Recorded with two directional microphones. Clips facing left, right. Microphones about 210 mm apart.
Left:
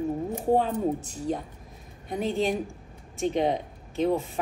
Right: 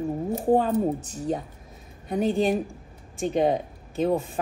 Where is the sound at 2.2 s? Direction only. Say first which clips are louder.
Right 3 dB; 15° right (ahead or behind).